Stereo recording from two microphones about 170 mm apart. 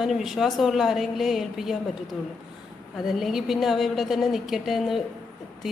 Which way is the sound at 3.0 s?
Centre (ahead or behind).